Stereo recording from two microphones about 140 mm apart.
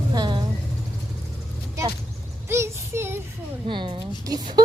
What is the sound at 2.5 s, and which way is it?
Child singing, 20° right (ahead or behind).